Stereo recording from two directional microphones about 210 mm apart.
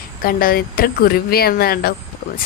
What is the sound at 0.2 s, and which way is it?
Speech, 45° left (ahead or behind).